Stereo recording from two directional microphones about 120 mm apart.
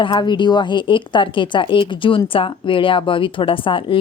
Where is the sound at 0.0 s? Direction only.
40° left (ahead or behind).